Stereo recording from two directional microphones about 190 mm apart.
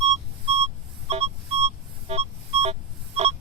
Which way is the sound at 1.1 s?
35° right (ahead or behind).